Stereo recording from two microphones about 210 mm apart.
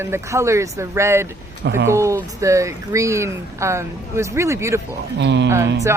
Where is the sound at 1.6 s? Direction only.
60° right (ahead or behind).